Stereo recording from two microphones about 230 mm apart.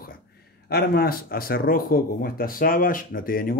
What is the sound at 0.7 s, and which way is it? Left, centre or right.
Speech, left.